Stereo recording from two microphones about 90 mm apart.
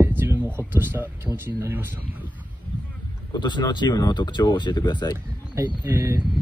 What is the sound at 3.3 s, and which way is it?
Speech, 55° left (ahead or behind).